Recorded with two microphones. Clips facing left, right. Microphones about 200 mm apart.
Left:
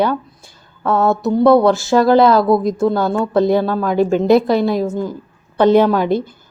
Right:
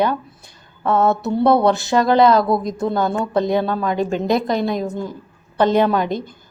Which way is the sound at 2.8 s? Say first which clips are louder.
Left 4 dB; 20° right (ahead or behind).